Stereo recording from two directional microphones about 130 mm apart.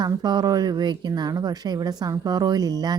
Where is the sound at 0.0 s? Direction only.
30° right (ahead or behind).